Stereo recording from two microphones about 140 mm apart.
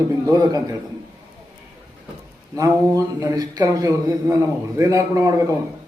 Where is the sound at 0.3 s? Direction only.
25° right (ahead or behind).